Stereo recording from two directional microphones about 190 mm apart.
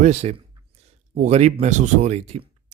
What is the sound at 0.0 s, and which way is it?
Speech, 35° right (ahead or behind).